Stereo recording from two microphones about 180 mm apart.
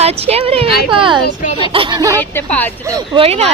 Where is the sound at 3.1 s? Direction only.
35° right (ahead or behind).